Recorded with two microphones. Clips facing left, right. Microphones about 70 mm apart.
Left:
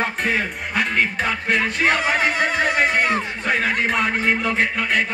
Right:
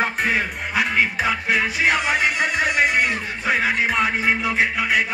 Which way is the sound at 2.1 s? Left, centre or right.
Left.